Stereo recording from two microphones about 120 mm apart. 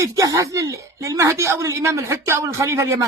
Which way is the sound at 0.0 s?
30° right (ahead or behind).